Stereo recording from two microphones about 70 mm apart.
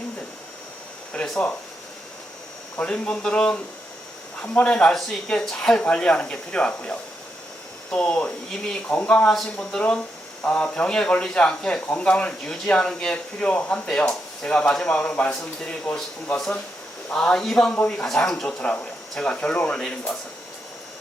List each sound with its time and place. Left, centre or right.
2.7 s speech: centre
9.3 s speech: centre
17.1 s speech: centre
18.4 s speech: centre